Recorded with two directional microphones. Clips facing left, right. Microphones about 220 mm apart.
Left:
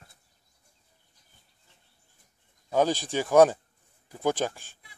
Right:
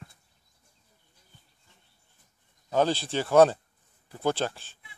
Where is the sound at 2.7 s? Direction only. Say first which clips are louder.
Even; 10° left (ahead or behind).